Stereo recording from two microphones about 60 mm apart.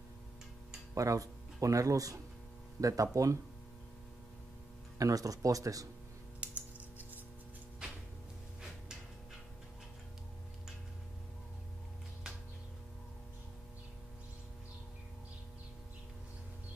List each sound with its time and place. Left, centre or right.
0.9 s speech: right
4.9 s speech: right
6.4 s typing: right
7.8 s a sound: centre